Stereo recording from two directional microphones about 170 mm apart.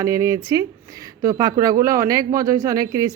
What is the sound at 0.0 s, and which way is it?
Speech, 20° right (ahead or behind).